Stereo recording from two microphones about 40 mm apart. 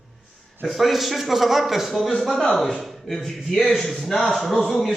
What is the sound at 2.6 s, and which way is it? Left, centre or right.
Speech, centre.